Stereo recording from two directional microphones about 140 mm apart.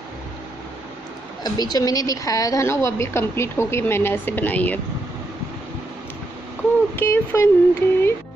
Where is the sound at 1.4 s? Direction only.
30° left (ahead or behind); by 4.7 s 10° left (ahead or behind).